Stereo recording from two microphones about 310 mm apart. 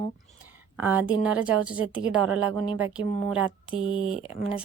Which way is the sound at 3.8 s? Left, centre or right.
Right.